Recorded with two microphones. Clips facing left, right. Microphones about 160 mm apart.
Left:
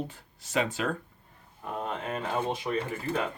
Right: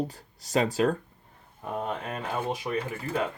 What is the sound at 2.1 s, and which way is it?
Speech, 10° right (ahead or behind).